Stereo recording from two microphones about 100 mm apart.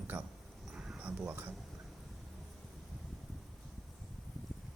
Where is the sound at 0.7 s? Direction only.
10° right (ahead or behind).